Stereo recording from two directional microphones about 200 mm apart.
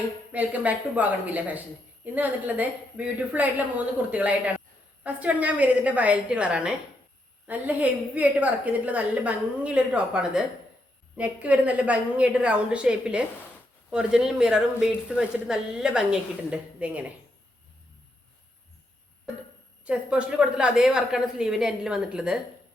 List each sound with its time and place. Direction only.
0.3 s a woman's voice: 10° right (ahead or behind)
19.8 s speech: 5° right (ahead or behind)